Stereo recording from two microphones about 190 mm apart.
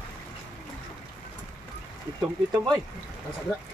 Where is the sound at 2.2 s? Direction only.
20° right (ahead or behind).